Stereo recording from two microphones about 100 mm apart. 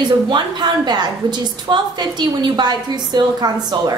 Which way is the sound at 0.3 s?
45° right (ahead or behind).